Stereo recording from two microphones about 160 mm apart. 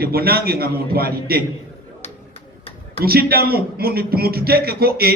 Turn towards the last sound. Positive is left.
turn(degrees=-75)  # may be behind; listen again after turning